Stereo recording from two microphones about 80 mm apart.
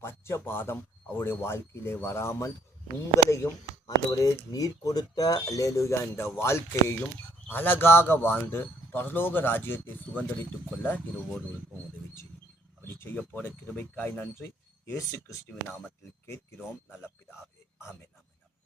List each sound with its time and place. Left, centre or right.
0.0 s speech: left
3.8 s speech: left
12.9 s a sound: left
13.1 s speech: left